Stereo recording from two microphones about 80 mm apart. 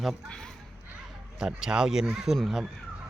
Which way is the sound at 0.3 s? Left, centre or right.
Centre.